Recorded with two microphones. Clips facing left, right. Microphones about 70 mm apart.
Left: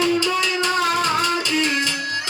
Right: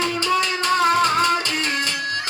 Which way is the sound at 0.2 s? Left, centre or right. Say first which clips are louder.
Even; right.